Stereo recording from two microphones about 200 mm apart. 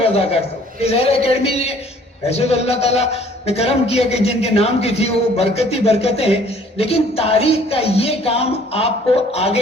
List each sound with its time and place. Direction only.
0.0 s a man's voice: 30° left (ahead or behind)